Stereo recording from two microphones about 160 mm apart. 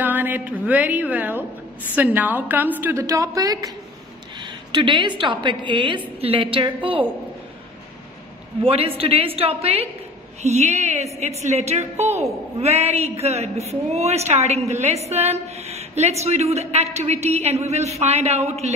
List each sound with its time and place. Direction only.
0.0 s a woman's voice: 10° right (ahead or behind); by 7.1 s 35° right (ahead or behind)
8.6 s a woman's voice: 35° right (ahead or behind)